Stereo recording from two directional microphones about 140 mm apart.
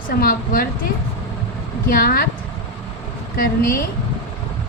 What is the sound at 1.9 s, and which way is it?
Speech, 90° left.